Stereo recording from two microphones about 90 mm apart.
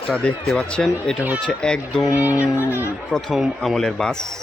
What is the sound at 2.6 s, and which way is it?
Speech, 30° left (ahead or behind).